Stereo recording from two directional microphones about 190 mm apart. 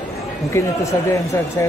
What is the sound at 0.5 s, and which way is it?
Speech, 15° left (ahead or behind).